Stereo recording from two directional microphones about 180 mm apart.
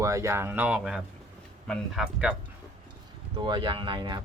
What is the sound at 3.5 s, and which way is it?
Speech, 25° right (ahead or behind).